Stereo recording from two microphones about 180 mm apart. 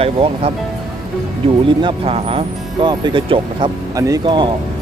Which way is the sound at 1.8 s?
30° right (ahead or behind).